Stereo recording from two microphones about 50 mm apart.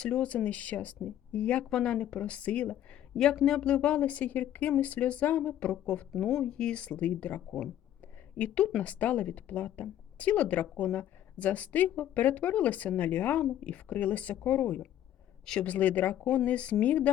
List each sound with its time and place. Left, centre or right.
0.0 s speech: left
3.4 s speech: centre
3.7 s speech: left
13.4 s speech: left
16.4 s speech: left